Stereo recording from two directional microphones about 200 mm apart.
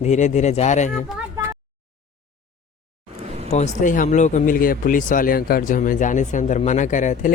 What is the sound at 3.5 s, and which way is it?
Speech, 35° left (ahead or behind).